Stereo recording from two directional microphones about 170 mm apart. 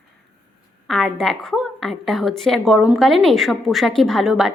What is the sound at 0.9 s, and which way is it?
A woman's voice, centre (ahead or behind).